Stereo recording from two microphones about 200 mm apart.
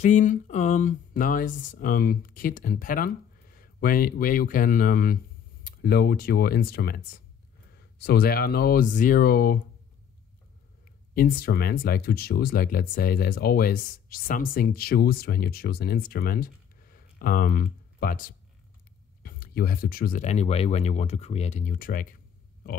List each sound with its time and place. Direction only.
0.0 s speech: 40° left (ahead or behind)
11.1 s speech: 45° left (ahead or behind)
19.2 s speech: 45° left (ahead or behind)